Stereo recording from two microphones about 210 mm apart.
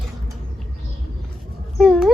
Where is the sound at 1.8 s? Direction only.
Centre (ahead or behind).